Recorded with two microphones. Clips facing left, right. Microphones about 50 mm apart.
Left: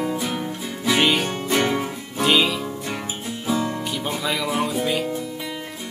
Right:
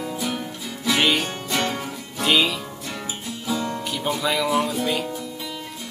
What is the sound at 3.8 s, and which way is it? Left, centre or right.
Music, centre.